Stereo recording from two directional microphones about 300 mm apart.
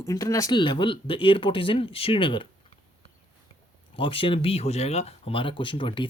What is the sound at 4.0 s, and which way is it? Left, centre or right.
Speech, centre.